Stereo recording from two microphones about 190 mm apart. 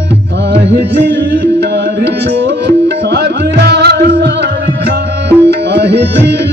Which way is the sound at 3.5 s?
60° right (ahead or behind).